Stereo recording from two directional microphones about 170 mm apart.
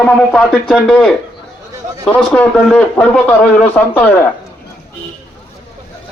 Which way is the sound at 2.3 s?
5° left (ahead or behind).